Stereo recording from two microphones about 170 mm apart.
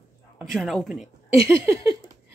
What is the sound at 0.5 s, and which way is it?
Speech, centre (ahead or behind).